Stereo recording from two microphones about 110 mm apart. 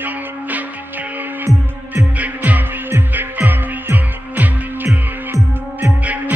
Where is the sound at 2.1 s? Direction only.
15° right (ahead or behind).